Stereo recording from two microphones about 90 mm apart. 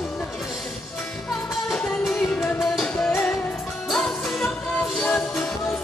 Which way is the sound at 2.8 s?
5° left (ahead or behind).